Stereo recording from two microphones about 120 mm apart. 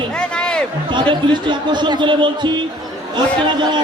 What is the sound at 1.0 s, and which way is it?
Speech, 40° right (ahead or behind).